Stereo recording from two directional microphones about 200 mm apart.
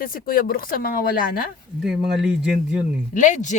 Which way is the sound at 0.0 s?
45° left (ahead or behind).